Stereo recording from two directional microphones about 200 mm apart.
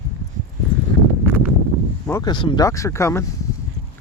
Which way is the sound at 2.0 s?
15° left (ahead or behind).